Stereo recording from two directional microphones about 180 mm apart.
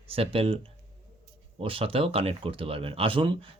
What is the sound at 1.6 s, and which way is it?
Speech, 30° right (ahead or behind).